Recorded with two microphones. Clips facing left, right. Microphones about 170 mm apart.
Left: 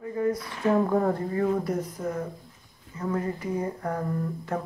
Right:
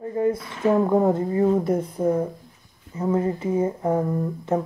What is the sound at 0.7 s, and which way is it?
Speech, 20° right (ahead or behind).